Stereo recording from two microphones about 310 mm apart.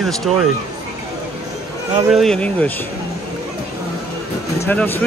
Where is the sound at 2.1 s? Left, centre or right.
Centre.